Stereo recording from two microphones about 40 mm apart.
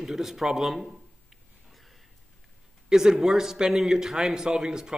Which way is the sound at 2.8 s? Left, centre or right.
Centre.